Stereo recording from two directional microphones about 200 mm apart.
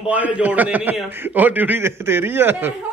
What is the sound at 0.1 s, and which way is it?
A man's voice, 10° right (ahead or behind).